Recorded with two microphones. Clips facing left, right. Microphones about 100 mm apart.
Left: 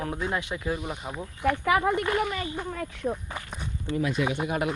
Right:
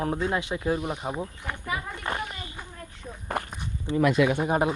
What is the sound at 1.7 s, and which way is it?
Speech, 80° left.